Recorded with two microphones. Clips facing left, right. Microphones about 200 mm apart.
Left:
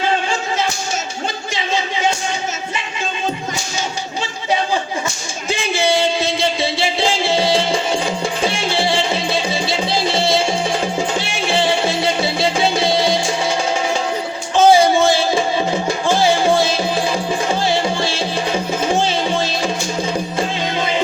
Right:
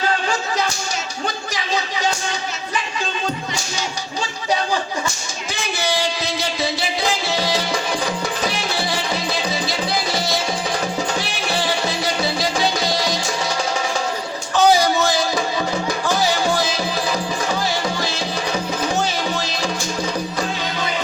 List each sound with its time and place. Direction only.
1.5 s music: 25° left (ahead or behind)
5.5 s music: 25° left (ahead or behind)
14.5 s music: 25° left (ahead or behind)